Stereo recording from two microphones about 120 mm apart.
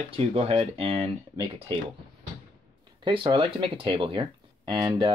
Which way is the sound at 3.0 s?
40° right (ahead or behind).